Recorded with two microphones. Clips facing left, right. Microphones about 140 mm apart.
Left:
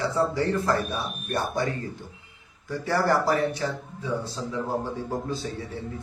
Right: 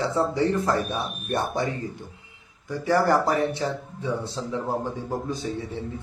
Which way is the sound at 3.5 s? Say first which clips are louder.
Right 2 dB; 25° right (ahead or behind).